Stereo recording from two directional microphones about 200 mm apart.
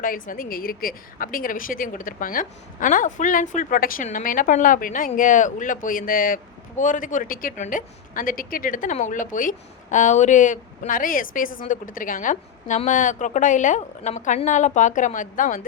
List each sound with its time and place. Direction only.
0.0 s a woman's voice: 45° left (ahead or behind)